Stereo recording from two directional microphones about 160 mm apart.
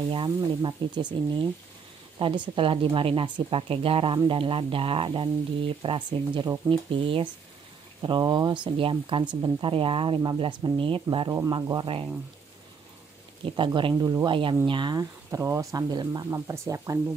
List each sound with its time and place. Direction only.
0.1 s speech: 30° right (ahead or behind)
13.6 s speech: 30° right (ahead or behind)